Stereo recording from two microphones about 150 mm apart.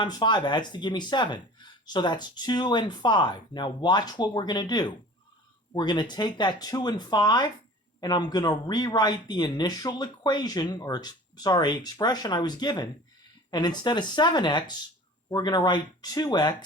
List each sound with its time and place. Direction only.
0.0 s speech: 30° left (ahead or behind)